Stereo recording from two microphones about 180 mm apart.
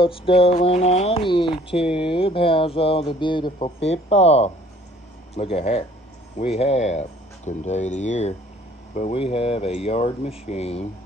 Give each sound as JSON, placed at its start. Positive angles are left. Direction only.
{"t": 0.0, "sound": "speech", "side_deg": 30}